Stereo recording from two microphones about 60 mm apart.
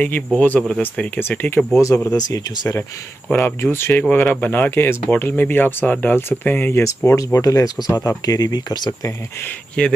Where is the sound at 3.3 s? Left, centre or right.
Left.